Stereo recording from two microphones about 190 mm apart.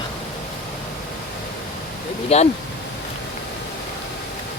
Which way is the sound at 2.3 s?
35° left (ahead or behind).